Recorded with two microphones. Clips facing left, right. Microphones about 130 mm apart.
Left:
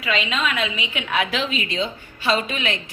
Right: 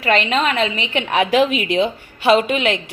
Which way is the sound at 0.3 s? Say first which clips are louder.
Right 6 dB; 55° right (ahead or behind).